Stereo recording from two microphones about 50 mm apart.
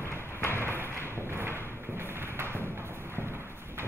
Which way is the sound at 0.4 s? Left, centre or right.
Left.